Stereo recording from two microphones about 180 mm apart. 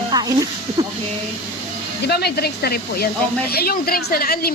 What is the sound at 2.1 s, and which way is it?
A woman's voice, 65° left (ahead or behind).